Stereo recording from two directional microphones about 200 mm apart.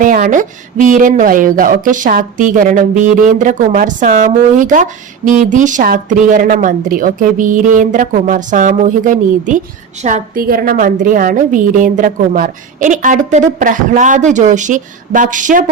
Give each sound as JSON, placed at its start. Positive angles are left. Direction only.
{"t": 0.0, "sound": "speech", "side_deg": -40}